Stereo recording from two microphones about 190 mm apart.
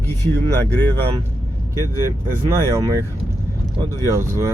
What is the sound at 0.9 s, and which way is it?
Speech, 20° right (ahead or behind).